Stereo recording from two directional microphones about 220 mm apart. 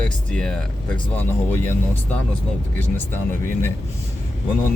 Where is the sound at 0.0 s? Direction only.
5° left (ahead or behind).